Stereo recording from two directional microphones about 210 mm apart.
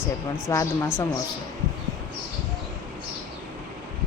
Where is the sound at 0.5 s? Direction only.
15° left (ahead or behind).